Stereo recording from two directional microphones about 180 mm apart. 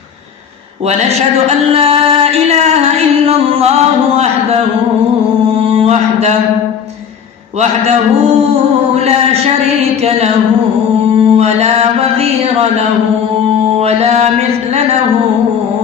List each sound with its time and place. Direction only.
1.5 s music: 35° right (ahead or behind)
4.2 s speech: 35° right (ahead or behind)
5.6 s mantra: 35° right (ahead or behind)
9.0 s a sound: 35° right (ahead or behind)
10.0 s music: 35° right (ahead or behind)
11.2 s mantra: 35° right (ahead or behind)
13.7 s mantra: 35° right (ahead or behind)